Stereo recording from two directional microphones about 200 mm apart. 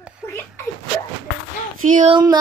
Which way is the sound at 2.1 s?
20° right (ahead or behind).